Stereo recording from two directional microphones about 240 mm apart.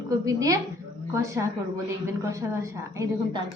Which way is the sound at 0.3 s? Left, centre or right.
Centre.